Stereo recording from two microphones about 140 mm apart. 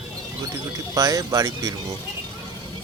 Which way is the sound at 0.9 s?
25° right (ahead or behind).